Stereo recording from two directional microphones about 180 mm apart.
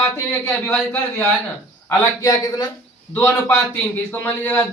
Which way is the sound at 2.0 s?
20° left (ahead or behind).